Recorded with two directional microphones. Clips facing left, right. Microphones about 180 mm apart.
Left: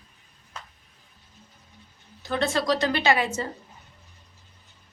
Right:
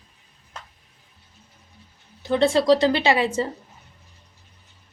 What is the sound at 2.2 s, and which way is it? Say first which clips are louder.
A woman's voice: right 7 dB; 25° right (ahead or behind).